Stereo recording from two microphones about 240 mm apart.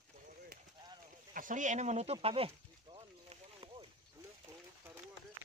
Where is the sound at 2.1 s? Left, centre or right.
Right.